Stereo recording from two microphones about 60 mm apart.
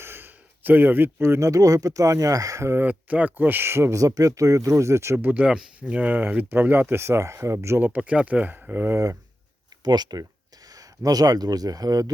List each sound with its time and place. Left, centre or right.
0.0 s a sound: right
1.5 s speech: right
2.7 s speech: right
3.9 s speech: right
5.3 s speech: centre; by 7.8 s right
7.8 s speech: right
10.1 s speech: right